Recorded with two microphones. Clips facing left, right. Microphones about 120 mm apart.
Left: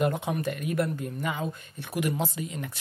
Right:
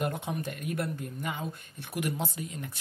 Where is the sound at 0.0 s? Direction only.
85° left.